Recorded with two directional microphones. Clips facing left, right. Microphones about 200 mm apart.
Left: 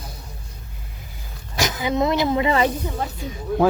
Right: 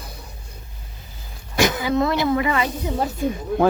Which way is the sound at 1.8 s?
20° left (ahead or behind).